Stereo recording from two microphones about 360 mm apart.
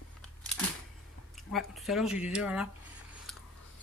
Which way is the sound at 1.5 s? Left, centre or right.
Centre.